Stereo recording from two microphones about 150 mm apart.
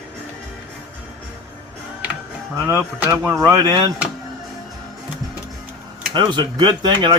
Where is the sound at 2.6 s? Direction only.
15° right (ahead or behind).